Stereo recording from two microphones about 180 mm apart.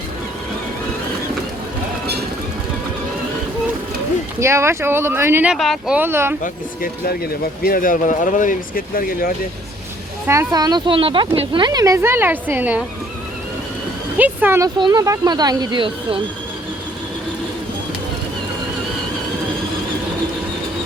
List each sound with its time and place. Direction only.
4.4 s speech: 15° right (ahead or behind); by 6.0 s centre (ahead or behind)
6.0 s speech: 15° right (ahead or behind)
6.4 s speech: 50° left (ahead or behind)
10.2 s speech: 20° right (ahead or behind)
14.2 s speech: 10° right (ahead or behind)
14.8 s speech: 25° right (ahead or behind)